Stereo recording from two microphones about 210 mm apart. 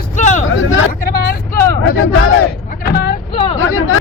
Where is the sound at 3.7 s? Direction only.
90° left.